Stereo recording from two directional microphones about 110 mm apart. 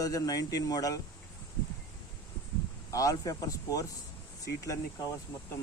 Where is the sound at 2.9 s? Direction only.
30° left (ahead or behind).